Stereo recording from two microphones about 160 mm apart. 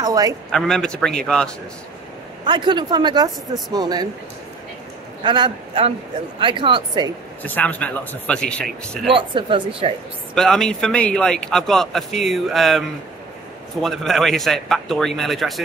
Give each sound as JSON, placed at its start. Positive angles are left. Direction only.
{"t": 0.0, "sound": "a sound", "side_deg": -25}
{"t": 0.5, "sound": "speech", "side_deg": 5}
{"t": 2.4, "sound": "speech", "side_deg": -30}
{"t": 5.2, "sound": "speech", "side_deg": -30}
{"t": 7.4, "sound": "speech", "side_deg": 10}
{"t": 9.1, "sound": "speech", "side_deg": -30}
{"t": 10.3, "sound": "speech", "side_deg": 5}